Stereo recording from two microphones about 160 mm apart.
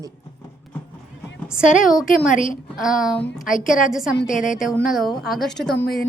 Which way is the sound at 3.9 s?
5° right (ahead or behind).